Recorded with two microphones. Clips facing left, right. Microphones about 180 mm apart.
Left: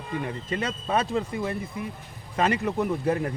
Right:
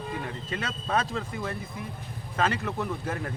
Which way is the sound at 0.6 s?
10° left (ahead or behind).